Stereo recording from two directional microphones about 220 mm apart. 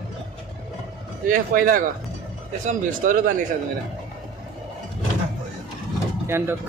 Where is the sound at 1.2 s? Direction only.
40° right (ahead or behind).